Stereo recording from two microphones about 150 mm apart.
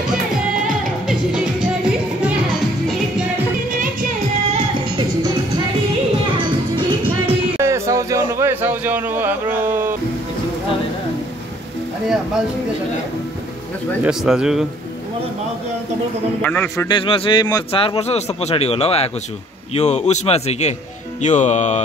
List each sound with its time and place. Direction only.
1.0 s music: 5° right (ahead or behind)
4.5 s music: 40° right (ahead or behind)
6.3 s music: 30° right (ahead or behind)
7.2 s music: 20° right (ahead or behind)
14.0 s speech: 5° right (ahead or behind)
16.4 s a man's voice: 15° left (ahead or behind)
16.8 s speech: 35° left (ahead or behind)
17.8 s speech: 45° left (ahead or behind)